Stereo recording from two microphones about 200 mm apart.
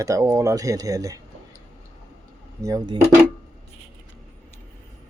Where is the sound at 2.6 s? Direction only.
20° right (ahead or behind).